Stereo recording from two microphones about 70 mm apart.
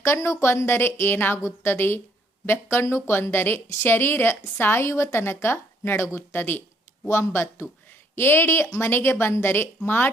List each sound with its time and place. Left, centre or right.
0.0 s a woman's voice: left